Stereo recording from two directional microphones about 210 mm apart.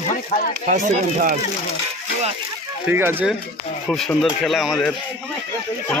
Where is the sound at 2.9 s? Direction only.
10° right (ahead or behind).